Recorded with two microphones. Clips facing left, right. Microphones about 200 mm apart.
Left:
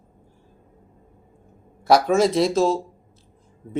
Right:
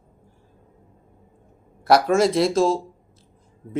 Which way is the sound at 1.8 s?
Centre (ahead or behind).